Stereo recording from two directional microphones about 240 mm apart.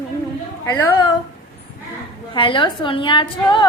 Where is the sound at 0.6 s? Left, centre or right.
Centre.